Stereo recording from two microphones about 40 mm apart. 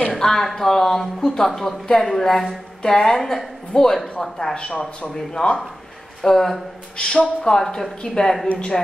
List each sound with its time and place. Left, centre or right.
0.1 s speech: centre
4.6 s speech: left
6.2 s speech: centre
7.0 s speech: left